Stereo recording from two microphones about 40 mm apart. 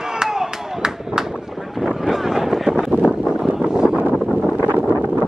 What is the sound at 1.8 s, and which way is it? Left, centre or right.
Vehicle, centre.